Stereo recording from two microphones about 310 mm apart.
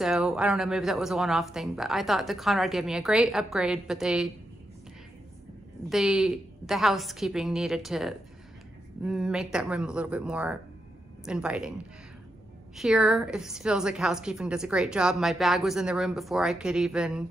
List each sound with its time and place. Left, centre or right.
0.0 s a woman's voice: centre
5.9 s a woman's voice: centre
12.7 s a woman's voice: centre